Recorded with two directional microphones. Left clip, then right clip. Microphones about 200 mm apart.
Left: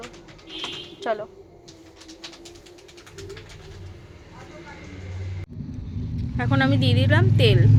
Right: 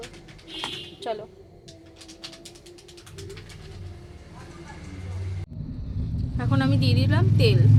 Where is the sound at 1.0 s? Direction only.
5° left (ahead or behind).